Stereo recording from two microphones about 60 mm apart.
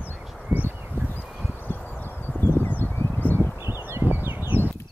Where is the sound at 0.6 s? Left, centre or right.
Right.